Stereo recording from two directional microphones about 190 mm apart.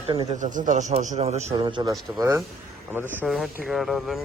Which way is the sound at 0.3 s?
40° right (ahead or behind).